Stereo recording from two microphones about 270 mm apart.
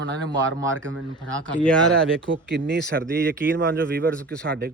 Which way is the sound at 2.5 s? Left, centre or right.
Right.